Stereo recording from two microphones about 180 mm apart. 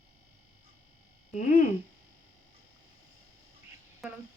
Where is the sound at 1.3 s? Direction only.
45° left (ahead or behind).